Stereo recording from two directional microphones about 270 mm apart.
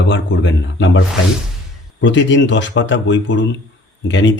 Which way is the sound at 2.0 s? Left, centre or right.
Left.